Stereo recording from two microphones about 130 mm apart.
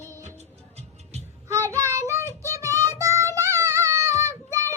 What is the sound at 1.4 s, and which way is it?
Child singing, 20° right (ahead or behind).